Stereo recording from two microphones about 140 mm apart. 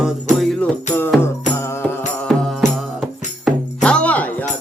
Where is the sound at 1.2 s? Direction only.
20° left (ahead or behind).